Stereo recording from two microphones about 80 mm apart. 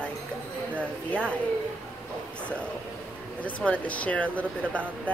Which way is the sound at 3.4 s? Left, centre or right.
Centre.